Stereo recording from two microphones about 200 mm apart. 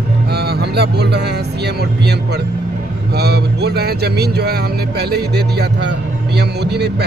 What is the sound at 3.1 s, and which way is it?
Speech, 55° right (ahead or behind).